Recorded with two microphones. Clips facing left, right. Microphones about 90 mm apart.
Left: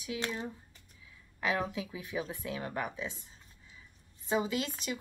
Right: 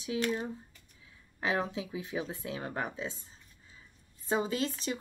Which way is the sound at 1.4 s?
30° right (ahead or behind).